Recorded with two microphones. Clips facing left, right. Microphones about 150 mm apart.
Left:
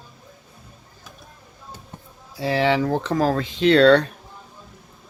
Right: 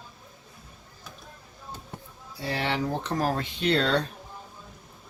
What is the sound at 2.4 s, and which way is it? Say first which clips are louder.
Speech: left 9 dB; 90° left.